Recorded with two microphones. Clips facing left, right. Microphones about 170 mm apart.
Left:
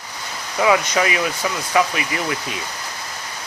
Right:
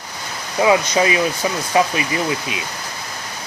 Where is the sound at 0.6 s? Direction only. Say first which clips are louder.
Right 2 dB; 25° right (ahead or behind).